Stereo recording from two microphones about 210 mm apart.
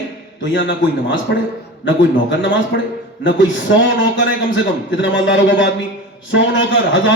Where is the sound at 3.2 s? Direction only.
60° left (ahead or behind).